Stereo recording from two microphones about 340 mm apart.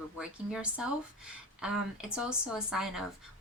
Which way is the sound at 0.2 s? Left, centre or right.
Centre.